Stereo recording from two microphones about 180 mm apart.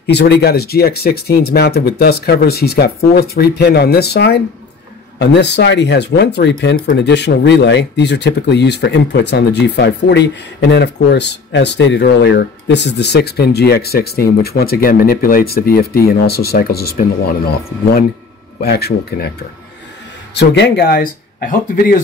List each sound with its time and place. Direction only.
0.0 s speech: 65° left (ahead or behind)
18.6 s speech: 60° left (ahead or behind)
20.3 s speech: 70° left (ahead or behind); by 21.9 s 55° left (ahead or behind)